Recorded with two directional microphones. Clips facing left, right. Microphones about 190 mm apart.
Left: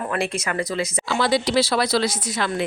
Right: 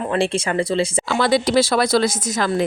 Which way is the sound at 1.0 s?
55° right (ahead or behind).